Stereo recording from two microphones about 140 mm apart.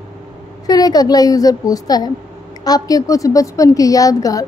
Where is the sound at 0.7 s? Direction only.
25° left (ahead or behind).